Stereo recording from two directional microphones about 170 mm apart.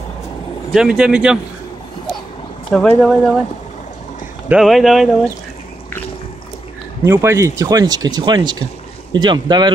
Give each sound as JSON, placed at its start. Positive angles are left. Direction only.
{"t": 0.7, "sound": "speech", "side_deg": -5}
{"t": 2.7, "sound": "speech", "side_deg": 5}
{"t": 4.5, "sound": "speech", "side_deg": 0}
{"t": 7.1, "sound": "speech", "side_deg": -15}